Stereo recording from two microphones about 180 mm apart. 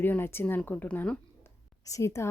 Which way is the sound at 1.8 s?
15° left (ahead or behind).